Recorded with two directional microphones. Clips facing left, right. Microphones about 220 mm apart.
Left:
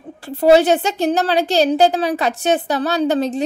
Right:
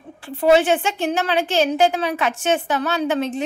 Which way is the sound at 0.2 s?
40° left (ahead or behind).